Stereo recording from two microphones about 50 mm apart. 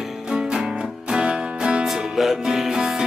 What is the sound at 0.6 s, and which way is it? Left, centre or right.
Music, centre.